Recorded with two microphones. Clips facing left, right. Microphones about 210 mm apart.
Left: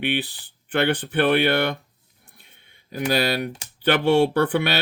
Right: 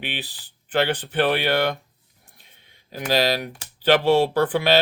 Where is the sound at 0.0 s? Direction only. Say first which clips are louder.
Left 8 dB; 55° left (ahead or behind).